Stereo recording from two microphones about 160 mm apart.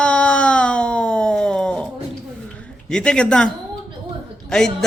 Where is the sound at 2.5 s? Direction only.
5° left (ahead or behind).